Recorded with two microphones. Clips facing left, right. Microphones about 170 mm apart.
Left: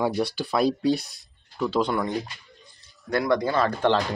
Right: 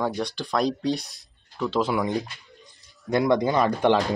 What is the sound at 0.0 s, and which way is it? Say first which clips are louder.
Speech: left 2 dB; 10° left (ahead or behind).